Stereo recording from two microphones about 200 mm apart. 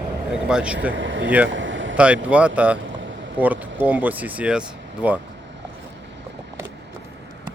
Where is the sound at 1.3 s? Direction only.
5° right (ahead or behind).